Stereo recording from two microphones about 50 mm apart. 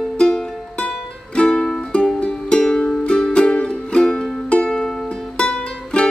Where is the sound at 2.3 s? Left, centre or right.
Left.